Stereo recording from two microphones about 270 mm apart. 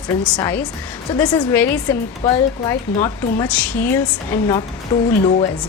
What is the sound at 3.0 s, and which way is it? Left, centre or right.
Speech, centre.